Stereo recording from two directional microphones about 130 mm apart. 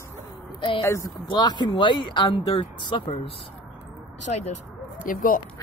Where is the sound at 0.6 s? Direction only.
40° left (ahead or behind).